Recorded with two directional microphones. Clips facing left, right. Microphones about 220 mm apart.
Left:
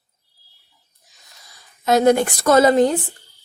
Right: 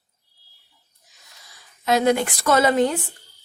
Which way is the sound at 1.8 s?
45° left (ahead or behind).